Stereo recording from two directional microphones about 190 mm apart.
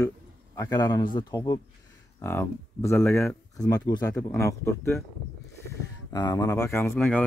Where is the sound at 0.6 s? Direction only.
20° left (ahead or behind).